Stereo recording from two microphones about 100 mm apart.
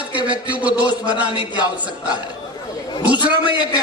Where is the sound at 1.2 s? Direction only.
50° left (ahead or behind).